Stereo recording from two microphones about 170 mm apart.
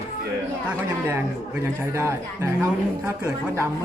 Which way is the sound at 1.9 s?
15° right (ahead or behind).